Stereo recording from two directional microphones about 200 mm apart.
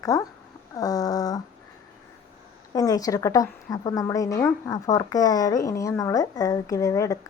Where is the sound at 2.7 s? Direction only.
20° left (ahead or behind).